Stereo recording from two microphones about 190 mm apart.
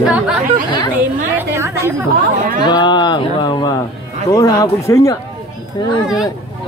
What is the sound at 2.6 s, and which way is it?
Speech, 25° left (ahead or behind).